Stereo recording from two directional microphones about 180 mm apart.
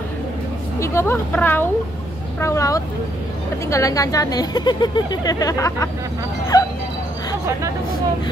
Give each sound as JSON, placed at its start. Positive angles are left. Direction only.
{"t": 0.7, "sound": "a woman's voice", "side_deg": 15}
{"t": 6.5, "sound": "music", "side_deg": 20}